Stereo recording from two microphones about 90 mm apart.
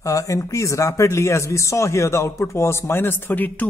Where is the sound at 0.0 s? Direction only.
35° left (ahead or behind).